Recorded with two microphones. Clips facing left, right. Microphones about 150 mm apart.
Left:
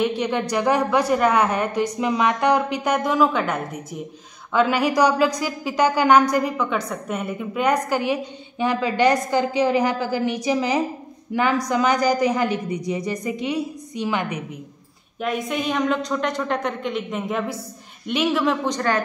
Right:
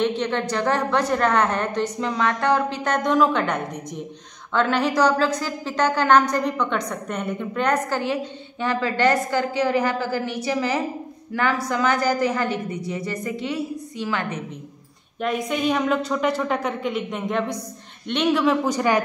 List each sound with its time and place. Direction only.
0.0 s a woman's voice: 10° left (ahead or behind)
15.1 s a woman's voice: centre (ahead or behind)